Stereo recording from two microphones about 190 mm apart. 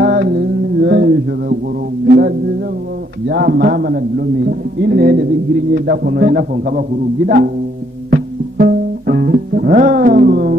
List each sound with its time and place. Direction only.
0.0 s mantra: 55° right (ahead or behind)
2.0 s a sound: 55° right (ahead or behind)
3.3 s a man's voice: 55° right (ahead or behind)
8.1 s music: 50° right (ahead or behind)